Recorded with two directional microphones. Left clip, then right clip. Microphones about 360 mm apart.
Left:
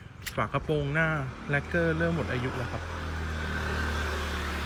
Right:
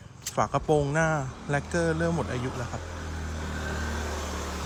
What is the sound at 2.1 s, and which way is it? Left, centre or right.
Vehicle, right.